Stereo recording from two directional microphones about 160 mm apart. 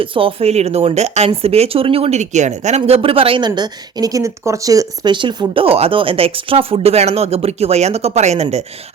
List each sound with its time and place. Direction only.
0.0 s speech: 35° right (ahead or behind)